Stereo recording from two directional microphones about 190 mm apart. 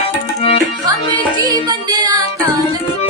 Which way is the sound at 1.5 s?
20° right (ahead or behind).